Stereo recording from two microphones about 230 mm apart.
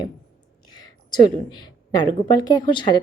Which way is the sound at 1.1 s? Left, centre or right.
Centre.